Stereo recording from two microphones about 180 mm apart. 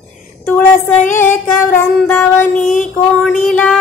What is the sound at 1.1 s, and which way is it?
Music, 10° left (ahead or behind).